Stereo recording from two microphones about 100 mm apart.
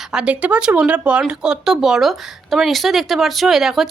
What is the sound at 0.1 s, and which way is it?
A woman's voice, 10° right (ahead or behind).